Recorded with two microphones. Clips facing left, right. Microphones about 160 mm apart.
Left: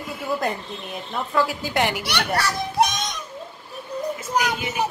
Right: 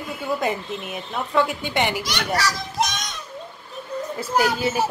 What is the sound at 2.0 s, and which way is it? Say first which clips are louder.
Speech: even; 60° left (ahead or behind).